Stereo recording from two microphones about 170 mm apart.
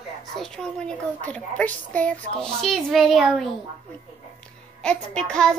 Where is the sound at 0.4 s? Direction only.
5° left (ahead or behind).